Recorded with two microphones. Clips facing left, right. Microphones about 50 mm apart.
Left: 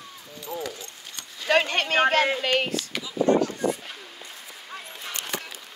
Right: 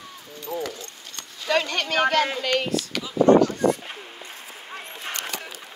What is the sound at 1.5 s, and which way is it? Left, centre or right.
Speech, left.